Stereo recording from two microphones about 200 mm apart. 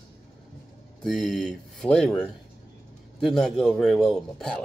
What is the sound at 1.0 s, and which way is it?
Speech, centre (ahead or behind).